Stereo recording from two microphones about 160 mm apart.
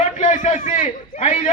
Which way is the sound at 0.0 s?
50° left (ahead or behind).